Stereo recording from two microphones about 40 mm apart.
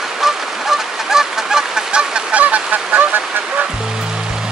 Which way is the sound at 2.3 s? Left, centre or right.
Right.